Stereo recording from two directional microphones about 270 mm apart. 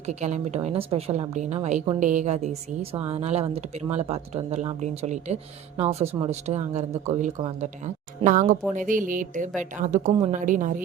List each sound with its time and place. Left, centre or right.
0.1 s a woman's voice: right